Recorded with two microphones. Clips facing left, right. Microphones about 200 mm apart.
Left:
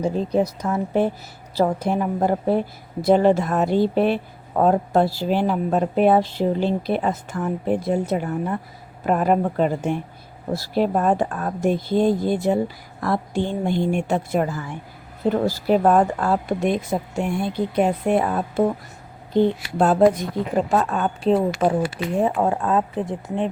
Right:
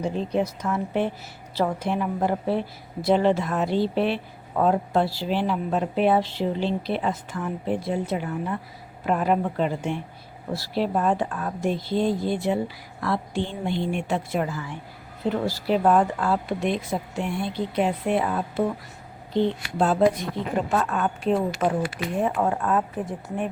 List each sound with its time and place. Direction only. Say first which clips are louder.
0.0 s a woman's voice: left 4 dB; 40° left (ahead or behind)
20.7 s speech: left 3 dB; 35° left (ahead or behind)